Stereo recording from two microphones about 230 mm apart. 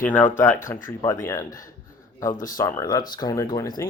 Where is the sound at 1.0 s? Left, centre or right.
Centre.